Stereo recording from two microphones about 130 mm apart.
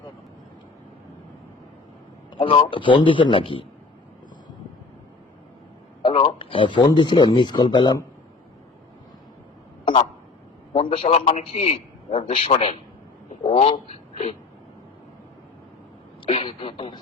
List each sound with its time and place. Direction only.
2.3 s a man's voice: 40° left (ahead or behind)
6.0 s speech: 45° left (ahead or behind)
10.7 s a man's voice: 45° left (ahead or behind)
16.2 s a woman's voice: 45° left (ahead or behind)